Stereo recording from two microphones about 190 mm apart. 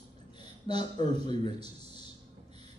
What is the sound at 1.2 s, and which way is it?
Speech, 25° left (ahead or behind).